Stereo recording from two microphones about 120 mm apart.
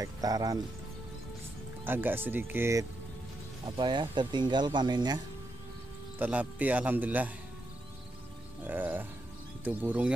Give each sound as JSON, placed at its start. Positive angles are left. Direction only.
{"t": 0.0, "sound": "speech", "side_deg": -30}
{"t": 1.9, "sound": "speech", "side_deg": -15}
{"t": 3.6, "sound": "speech", "side_deg": -40}
{"t": 6.1, "sound": "speech", "side_deg": -15}
{"t": 8.6, "sound": "speech", "side_deg": -15}